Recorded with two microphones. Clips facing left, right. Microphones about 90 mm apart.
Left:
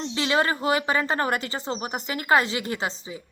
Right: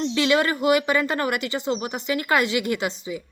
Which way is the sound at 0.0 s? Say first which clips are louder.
Right 3 dB; 25° left (ahead or behind).